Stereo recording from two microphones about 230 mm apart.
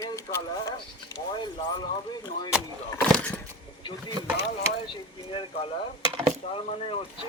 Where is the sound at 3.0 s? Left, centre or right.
Centre.